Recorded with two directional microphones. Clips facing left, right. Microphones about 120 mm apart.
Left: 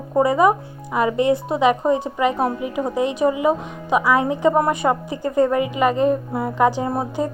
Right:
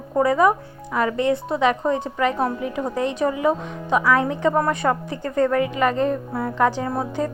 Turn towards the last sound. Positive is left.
turn(degrees=20)  # may be behind; listen again after turning